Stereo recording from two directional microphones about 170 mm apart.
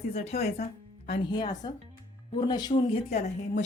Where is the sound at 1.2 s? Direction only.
25° left (ahead or behind).